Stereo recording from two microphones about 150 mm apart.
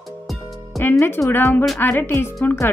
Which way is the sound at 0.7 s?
15° left (ahead or behind).